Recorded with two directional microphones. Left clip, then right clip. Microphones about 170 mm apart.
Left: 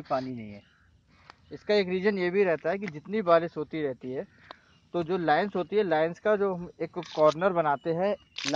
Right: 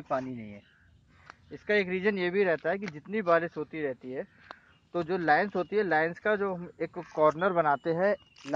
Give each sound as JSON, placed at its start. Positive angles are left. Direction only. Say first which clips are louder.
{"t": 0.1, "sound": "speech", "louder": "left 2 dB", "side_deg": 15}